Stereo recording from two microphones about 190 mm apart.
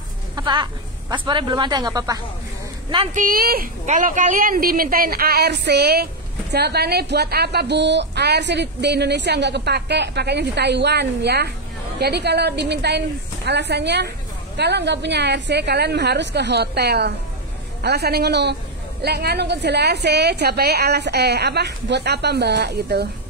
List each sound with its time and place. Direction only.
0.4 s a sound: 25° right (ahead or behind)
1.1 s speech: 25° right (ahead or behind)
3.2 s a woman's voice: 50° right (ahead or behind)